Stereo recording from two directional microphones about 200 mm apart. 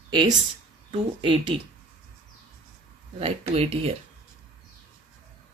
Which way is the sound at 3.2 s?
30° right (ahead or behind).